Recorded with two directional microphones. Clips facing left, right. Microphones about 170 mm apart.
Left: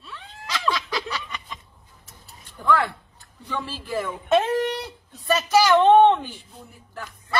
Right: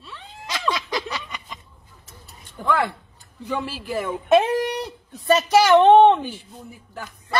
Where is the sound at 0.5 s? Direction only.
20° right (ahead or behind).